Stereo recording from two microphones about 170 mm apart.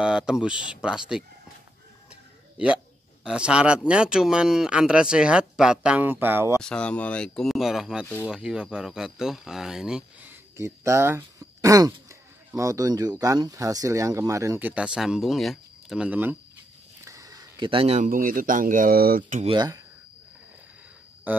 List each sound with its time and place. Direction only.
0.0 s speech: 5° right (ahead or behind)
3.3 s speech: 5° right (ahead or behind)
6.6 s speech: 5° left (ahead or behind)
10.6 s a man's voice: 15° right (ahead or behind); by 19.4 s 55° right (ahead or behind)
19.4 s speech: 25° right (ahead or behind)